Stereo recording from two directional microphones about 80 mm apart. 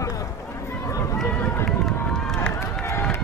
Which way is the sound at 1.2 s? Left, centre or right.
Left.